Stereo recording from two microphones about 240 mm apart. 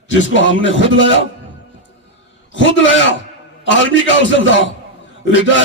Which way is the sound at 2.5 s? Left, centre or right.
Left.